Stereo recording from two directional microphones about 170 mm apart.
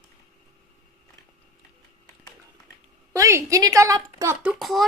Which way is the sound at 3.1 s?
20° right (ahead or behind).